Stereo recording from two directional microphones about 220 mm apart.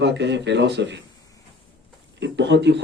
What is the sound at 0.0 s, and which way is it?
Speech, 50° right (ahead or behind).